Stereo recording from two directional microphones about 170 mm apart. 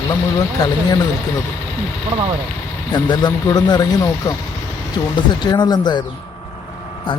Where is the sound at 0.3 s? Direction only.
25° left (ahead or behind).